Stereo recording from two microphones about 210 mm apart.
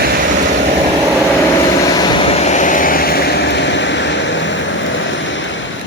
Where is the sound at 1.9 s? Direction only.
20° left (ahead or behind); by 4.6 s 60° left (ahead or behind).